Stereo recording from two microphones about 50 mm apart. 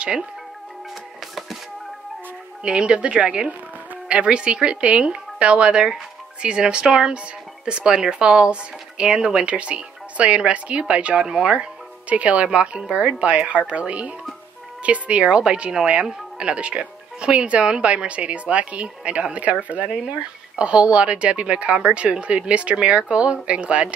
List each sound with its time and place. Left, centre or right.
2.6 s speech: centre
9.5 s speech: right